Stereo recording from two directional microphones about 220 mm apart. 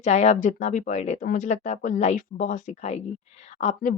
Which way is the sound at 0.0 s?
30° left (ahead or behind).